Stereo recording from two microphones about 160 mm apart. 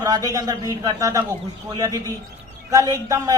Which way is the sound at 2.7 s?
20° right (ahead or behind).